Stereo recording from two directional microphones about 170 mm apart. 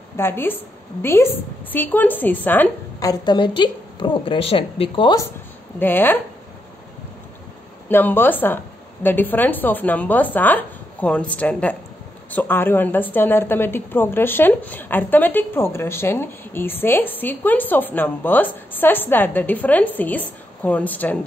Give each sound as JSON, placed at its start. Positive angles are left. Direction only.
{"t": 0.2, "sound": "a woman's voice", "side_deg": 15}
{"t": 5.8, "sound": "a woman's voice", "side_deg": 10}
{"t": 7.9, "sound": "a woman's voice", "side_deg": 10}